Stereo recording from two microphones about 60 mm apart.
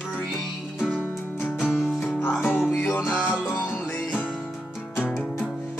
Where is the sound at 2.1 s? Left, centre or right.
Left.